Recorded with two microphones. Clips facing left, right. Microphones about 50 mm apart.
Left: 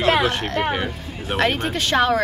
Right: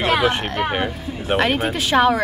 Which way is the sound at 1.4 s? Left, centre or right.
Centre.